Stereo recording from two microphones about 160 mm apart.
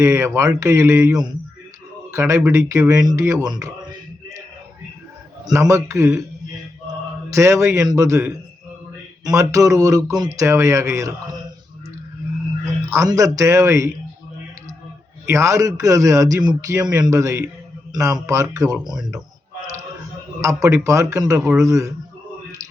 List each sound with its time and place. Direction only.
0.0 s a man's voice: 15° right (ahead or behind)
5.5 s a man's voice: 20° right (ahead or behind)
7.3 s a man's voice: 20° right (ahead or behind)
12.9 s a man's voice: 20° right (ahead or behind)
15.3 s a man's voice: 20° right (ahead or behind)
20.4 s a man's voice: 20° right (ahead or behind)
21.3 s speech: 5° right (ahead or behind)
21.6 s a man's voice: 20° right (ahead or behind)